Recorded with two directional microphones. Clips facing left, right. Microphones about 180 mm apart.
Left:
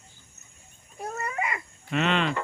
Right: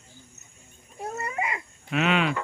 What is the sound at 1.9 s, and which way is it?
Speech, 5° right (ahead or behind).